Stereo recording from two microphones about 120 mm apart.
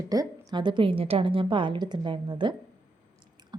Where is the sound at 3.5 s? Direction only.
40° right (ahead or behind).